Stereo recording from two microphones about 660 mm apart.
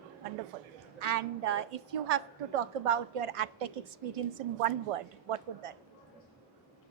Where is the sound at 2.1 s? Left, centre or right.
Right.